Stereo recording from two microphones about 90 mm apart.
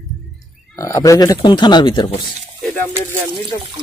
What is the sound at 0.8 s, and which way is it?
Speech, 35° left (ahead or behind).